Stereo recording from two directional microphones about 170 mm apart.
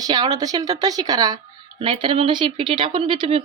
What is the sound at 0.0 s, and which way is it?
Speech, 25° right (ahead or behind).